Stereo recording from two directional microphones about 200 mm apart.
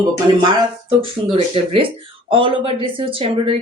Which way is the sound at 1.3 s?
25° right (ahead or behind).